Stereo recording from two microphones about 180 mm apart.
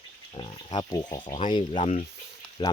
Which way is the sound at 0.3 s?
25° left (ahead or behind).